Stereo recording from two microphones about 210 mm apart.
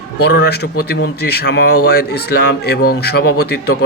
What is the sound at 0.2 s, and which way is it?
Speech, 50° left (ahead or behind).